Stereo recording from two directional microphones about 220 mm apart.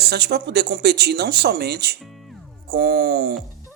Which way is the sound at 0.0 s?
50° right (ahead or behind).